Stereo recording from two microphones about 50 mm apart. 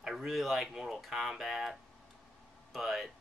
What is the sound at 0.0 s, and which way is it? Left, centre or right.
Speech, centre.